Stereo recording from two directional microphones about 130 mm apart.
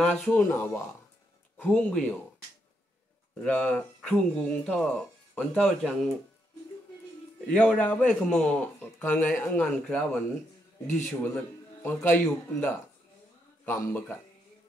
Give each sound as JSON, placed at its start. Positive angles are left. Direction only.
{"t": 0.0, "sound": "speech", "side_deg": 10}
{"t": 3.4, "sound": "speech", "side_deg": 10}
{"t": 7.4, "sound": "speech", "side_deg": 10}